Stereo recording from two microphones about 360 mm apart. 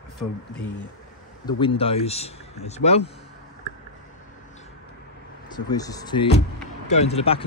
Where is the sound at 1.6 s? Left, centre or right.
Centre.